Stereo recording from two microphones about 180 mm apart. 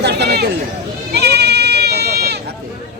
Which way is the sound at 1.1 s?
65° right (ahead or behind).